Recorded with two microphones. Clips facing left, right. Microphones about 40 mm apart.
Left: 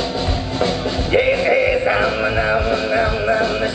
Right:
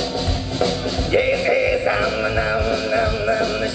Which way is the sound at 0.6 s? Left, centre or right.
Left.